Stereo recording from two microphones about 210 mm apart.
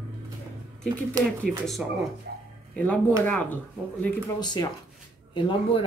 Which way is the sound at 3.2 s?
5° left (ahead or behind).